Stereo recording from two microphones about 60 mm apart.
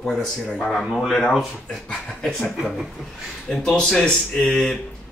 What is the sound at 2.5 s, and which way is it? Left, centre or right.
Speech, centre.